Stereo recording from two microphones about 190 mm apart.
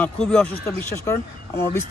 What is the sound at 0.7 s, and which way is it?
Speech, 15° left (ahead or behind).